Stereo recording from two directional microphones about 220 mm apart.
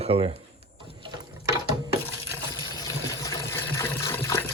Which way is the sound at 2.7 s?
15° left (ahead or behind).